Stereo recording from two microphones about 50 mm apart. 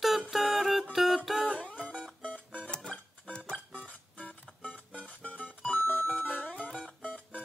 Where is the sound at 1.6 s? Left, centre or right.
Left.